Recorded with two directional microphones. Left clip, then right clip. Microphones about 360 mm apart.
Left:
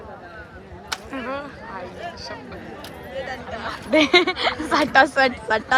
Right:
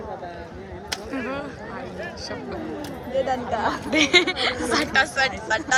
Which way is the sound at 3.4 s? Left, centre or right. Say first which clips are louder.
Right 6 dB; right.